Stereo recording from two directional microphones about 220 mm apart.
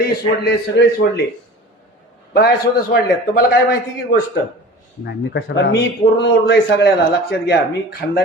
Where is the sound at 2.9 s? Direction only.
45° left (ahead or behind).